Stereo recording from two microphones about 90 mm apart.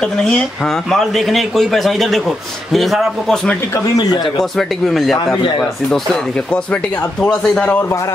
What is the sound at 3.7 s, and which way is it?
Speech, 45° left (ahead or behind).